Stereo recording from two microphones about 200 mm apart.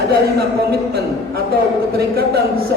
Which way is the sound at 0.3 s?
50° right (ahead or behind).